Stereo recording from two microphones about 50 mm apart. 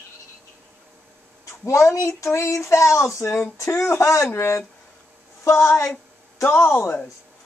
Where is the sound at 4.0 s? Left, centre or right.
Left.